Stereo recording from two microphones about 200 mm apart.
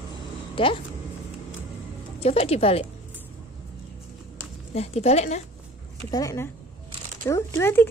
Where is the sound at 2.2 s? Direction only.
30° left (ahead or behind).